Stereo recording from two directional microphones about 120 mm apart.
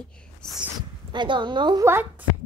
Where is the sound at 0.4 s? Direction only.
5° left (ahead or behind).